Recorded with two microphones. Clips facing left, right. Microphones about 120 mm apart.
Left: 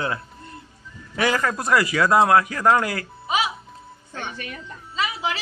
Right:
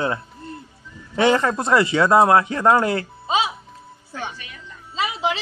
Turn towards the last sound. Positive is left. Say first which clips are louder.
# right 3 dB
turn(degrees=-25)  # may be behind; listen again after turning